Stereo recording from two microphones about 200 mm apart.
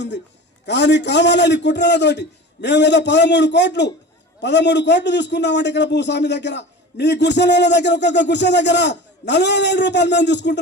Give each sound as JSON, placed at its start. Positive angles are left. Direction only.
{"t": 0.6, "sound": "a man's voice", "side_deg": 60}